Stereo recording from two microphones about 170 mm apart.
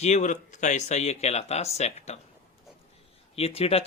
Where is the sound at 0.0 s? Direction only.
45° left (ahead or behind).